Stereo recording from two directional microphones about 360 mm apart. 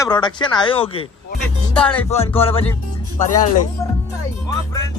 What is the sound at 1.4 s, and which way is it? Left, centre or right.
Music, centre.